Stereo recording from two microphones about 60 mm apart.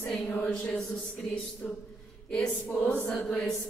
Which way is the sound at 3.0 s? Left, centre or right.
Centre.